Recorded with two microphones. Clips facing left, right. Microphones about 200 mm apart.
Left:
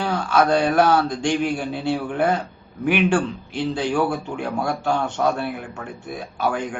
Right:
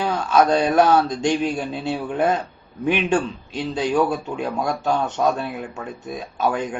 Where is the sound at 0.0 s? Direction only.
20° right (ahead or behind).